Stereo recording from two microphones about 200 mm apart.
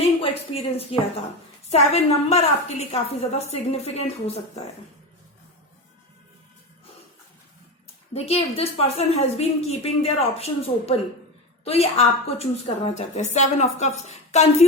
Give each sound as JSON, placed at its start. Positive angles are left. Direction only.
{"t": 0.2, "sound": "a woman's voice", "side_deg": 30}
{"t": 8.1, "sound": "a woman's voice", "side_deg": 30}